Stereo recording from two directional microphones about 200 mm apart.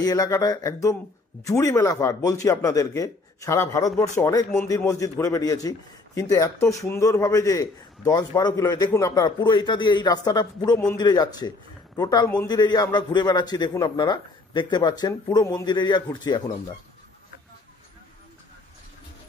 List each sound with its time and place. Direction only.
0.0 s a man's voice: 20° left (ahead or behind)